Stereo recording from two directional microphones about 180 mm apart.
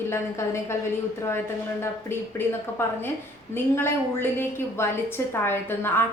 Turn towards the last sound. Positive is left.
turn(degrees=10)  # may be behind; listen again after turning